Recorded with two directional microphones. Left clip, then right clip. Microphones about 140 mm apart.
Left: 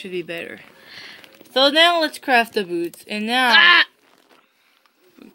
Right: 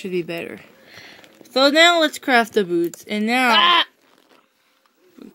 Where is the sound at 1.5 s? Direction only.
55° right (ahead or behind).